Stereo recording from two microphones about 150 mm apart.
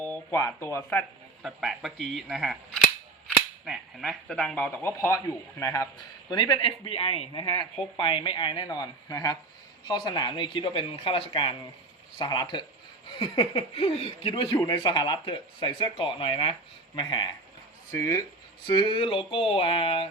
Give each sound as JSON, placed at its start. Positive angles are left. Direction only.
{"t": 0.0, "sound": "speech", "side_deg": 10}
{"t": 1.4, "sound": "speech", "side_deg": 0}
{"t": 3.7, "sound": "speech", "side_deg": 0}
{"t": 17.9, "sound": "speech", "side_deg": 20}
{"t": 18.6, "sound": "speech", "side_deg": 30}